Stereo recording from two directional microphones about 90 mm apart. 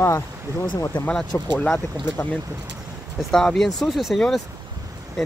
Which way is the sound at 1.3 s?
25° left (ahead or behind).